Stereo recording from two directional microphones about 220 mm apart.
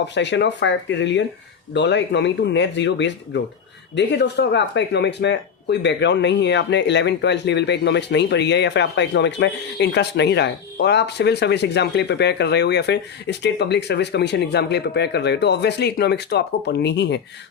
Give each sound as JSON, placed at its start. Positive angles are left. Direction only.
{"t": 0.0, "sound": "speech", "side_deg": 55}